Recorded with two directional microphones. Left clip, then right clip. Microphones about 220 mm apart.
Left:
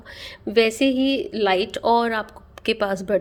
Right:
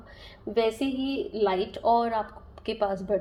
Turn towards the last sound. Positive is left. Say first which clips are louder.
# left 6 dB
turn(degrees=45)  # may be behind; listen again after turning